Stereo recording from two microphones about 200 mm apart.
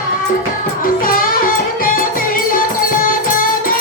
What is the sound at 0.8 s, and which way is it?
Music, 45° left (ahead or behind).